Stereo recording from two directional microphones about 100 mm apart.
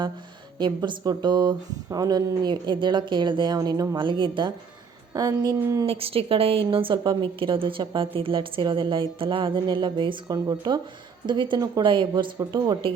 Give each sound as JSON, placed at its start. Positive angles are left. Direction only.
{"t": 0.6, "sound": "speech", "side_deg": -45}
{"t": 5.1, "sound": "speech", "side_deg": -40}
{"t": 5.8, "sound": "a woman's voice", "side_deg": -70}